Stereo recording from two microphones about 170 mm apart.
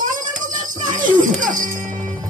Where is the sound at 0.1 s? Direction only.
50° right (ahead or behind).